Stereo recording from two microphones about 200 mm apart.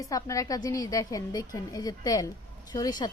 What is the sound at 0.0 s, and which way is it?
A woman's voice, 15° left (ahead or behind).